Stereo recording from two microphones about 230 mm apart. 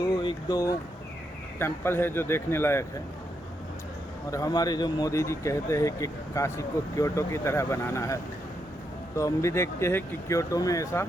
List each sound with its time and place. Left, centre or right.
0.0 s a sound: centre
1.5 s speech: centre
4.3 s speech: centre